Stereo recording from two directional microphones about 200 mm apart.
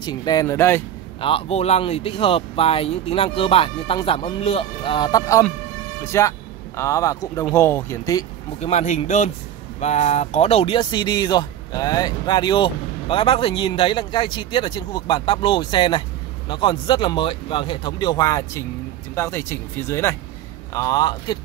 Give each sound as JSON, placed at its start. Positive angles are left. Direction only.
{"t": 0.0, "sound": "speech", "side_deg": 20}
{"t": 1.2, "sound": "speech", "side_deg": 30}
{"t": 8.5, "sound": "speech", "side_deg": 35}